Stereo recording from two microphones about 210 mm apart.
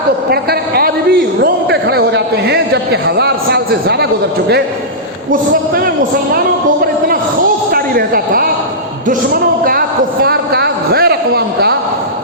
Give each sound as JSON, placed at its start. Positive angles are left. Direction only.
{"t": 0.3, "sound": "a man's voice", "side_deg": -50}
{"t": 7.7, "sound": "a man's voice", "side_deg": -45}